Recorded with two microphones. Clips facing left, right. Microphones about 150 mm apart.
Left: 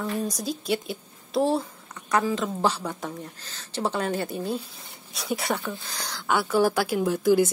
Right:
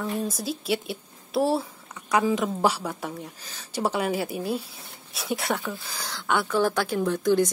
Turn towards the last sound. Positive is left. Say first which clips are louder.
# left 1 dB
turn(degrees=10)  # may be behind; listen again after turning